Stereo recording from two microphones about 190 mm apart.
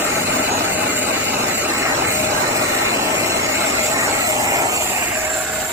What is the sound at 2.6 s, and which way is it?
Vehicle, 15° right (ahead or behind).